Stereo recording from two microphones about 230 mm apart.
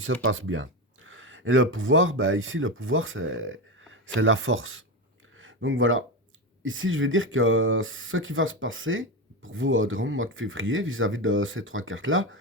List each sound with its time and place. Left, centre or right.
0.0 s speech: right